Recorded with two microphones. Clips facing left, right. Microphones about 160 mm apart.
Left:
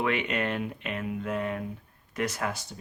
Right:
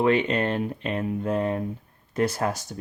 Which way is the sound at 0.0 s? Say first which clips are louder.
Right 7 dB; 30° right (ahead or behind).